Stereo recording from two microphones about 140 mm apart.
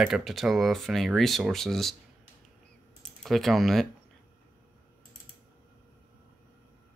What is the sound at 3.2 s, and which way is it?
Speech, centre (ahead or behind).